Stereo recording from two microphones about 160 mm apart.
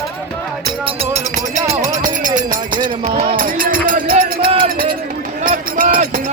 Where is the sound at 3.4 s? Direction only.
60° right (ahead or behind).